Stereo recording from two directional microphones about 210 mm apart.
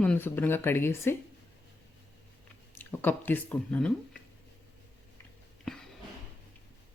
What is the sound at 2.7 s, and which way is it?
Speech, 10° left (ahead or behind).